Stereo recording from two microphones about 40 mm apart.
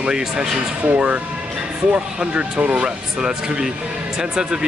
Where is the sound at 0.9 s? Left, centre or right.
Right.